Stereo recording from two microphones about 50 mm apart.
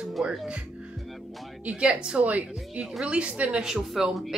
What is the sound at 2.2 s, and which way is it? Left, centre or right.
Speech, right.